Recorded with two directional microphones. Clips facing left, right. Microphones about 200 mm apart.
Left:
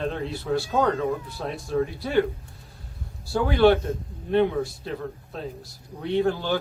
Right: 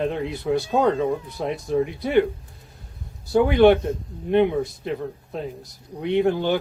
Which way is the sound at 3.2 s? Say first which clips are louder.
Right 4 dB; 20° right (ahead or behind).